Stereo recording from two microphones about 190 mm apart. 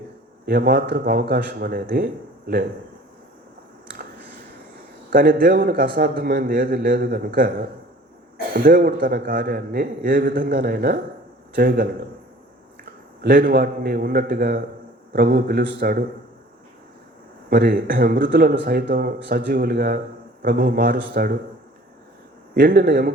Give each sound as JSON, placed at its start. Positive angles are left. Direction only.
{"t": 0.4, "sound": "speech", "side_deg": -55}
{"t": 5.1, "sound": "a man's voice", "side_deg": -50}
{"t": 8.5, "sound": "a man's voice", "side_deg": -50}
{"t": 13.2, "sound": "a man's voice", "side_deg": -50}
{"t": 17.5, "sound": "a man's voice", "side_deg": -50}
{"t": 22.5, "sound": "speech", "side_deg": -55}